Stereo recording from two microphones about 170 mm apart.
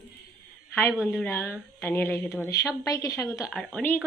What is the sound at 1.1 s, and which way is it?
A woman's voice, 10° left (ahead or behind).